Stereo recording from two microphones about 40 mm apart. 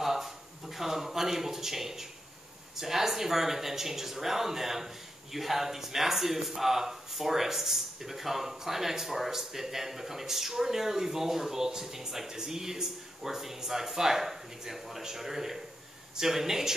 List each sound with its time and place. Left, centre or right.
0.0 s speech: centre